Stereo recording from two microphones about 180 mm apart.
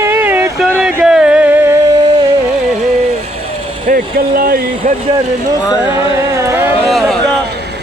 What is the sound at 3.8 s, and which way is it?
Speech, 50° right (ahead or behind).